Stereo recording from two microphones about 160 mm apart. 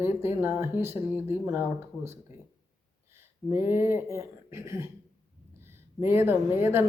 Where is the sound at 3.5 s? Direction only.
15° right (ahead or behind).